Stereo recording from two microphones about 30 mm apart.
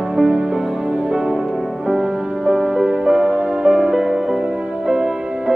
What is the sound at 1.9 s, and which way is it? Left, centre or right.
Music, centre.